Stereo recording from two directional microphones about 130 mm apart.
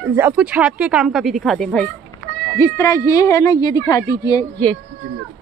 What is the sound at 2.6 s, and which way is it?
A woman's voice, 20° left (ahead or behind).